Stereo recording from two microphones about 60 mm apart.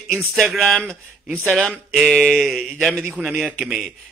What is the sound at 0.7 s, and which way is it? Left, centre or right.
Speech, left.